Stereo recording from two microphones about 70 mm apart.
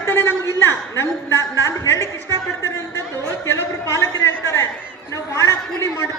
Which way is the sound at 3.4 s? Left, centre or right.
Left.